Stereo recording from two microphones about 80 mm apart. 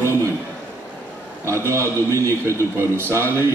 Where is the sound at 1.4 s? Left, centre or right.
Right.